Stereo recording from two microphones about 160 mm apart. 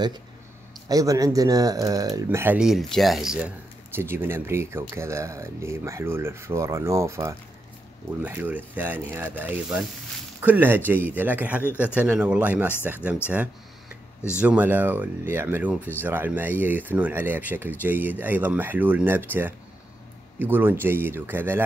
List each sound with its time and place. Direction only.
0.8 s speech: 20° right (ahead or behind)
2.2 s speech: 10° right (ahead or behind)
14.4 s speech: 10° right (ahead or behind)